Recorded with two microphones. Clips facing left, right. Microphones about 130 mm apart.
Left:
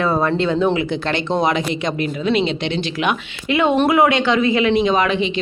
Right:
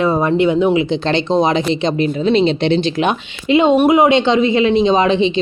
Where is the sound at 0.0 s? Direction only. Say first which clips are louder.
Right 4 dB; 20° right (ahead or behind).